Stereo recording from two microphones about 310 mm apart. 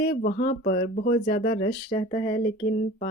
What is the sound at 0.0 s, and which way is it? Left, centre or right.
Speech, left.